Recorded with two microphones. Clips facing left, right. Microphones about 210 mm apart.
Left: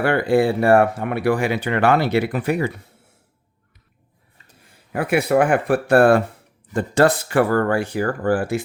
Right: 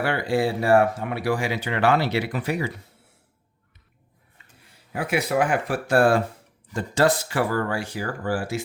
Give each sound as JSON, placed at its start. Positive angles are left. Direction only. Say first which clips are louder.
{"t": 0.0, "sound": "speech", "louder": "left 6 dB", "side_deg": 55}
{"t": 4.4, "sound": "a sound", "louder": "left 3 dB", "side_deg": 35}
{"t": 4.9, "sound": "speech", "louder": "left 6 dB", "side_deg": 55}